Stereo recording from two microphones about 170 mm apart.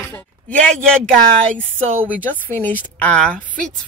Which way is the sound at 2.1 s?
10° left (ahead or behind).